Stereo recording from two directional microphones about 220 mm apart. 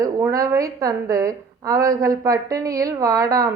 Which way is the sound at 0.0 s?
15° right (ahead or behind).